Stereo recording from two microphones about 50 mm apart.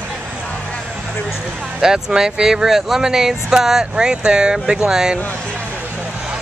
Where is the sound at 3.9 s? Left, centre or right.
Centre.